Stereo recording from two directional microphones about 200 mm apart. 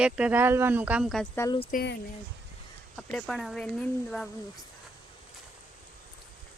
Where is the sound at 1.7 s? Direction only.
55° left (ahead or behind).